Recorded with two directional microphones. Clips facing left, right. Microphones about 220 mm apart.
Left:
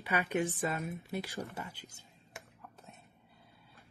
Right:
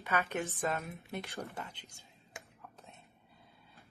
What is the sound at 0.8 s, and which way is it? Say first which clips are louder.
Speech: left 4 dB; centre (ahead or behind).